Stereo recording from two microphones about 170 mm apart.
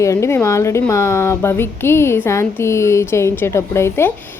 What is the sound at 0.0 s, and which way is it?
A woman's voice, 15° left (ahead or behind).